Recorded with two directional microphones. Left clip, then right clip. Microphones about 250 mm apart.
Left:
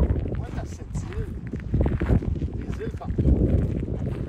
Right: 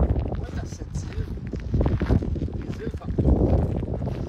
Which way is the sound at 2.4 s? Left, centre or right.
Left.